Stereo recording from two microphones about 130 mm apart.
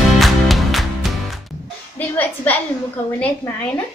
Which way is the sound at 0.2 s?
Centre (ahead or behind).